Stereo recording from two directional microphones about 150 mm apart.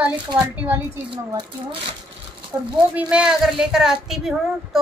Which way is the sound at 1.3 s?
25° right (ahead or behind).